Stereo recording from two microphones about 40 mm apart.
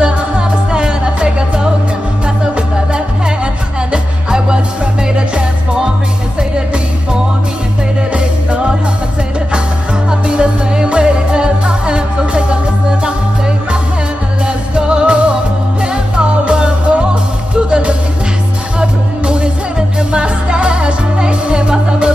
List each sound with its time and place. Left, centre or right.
0.0 s music: right
8.1 s music: right
10.2 s music: right
14.8 s music: right